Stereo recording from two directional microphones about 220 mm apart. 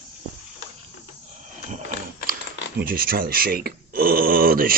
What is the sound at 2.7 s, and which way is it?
Speech, 40° right (ahead or behind).